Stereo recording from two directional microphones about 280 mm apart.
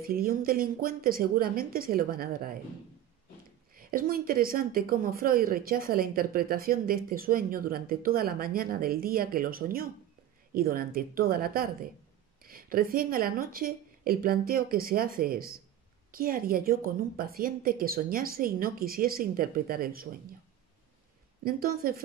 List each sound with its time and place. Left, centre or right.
0.0 s a woman's voice: right
3.7 s a woman's voice: right
21.5 s a woman's voice: right